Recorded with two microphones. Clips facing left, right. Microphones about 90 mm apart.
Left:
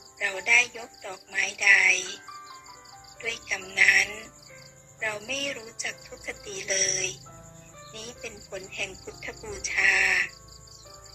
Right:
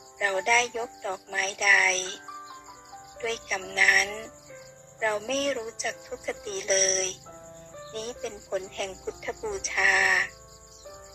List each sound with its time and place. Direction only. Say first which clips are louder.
0.2 s speech: right 4 dB; 35° right (ahead or behind)